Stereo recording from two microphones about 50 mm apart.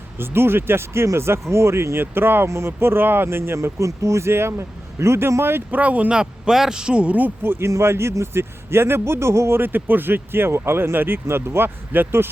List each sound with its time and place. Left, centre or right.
0.2 s speech: right
2.5 s speech: right
5.7 s speech: right
6.1 s a man's voice: centre
7.4 s speech: right
7.7 s speech: right
9.6 s speech: right